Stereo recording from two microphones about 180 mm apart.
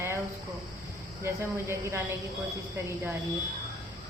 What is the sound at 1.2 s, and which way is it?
Speech, 15° right (ahead or behind).